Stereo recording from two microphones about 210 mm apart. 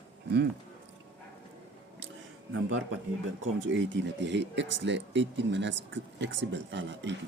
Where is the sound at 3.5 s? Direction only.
60° right (ahead or behind).